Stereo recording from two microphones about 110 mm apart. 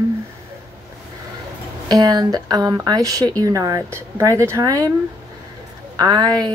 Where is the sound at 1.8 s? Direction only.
35° right (ahead or behind).